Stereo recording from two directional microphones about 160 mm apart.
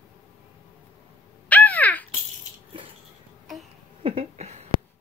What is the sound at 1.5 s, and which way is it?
Caw, 10° left (ahead or behind).